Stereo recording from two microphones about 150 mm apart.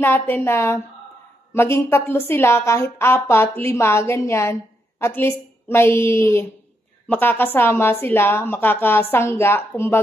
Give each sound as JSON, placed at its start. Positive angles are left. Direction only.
{"t": 0.0, "sound": "a woman's voice", "side_deg": 15}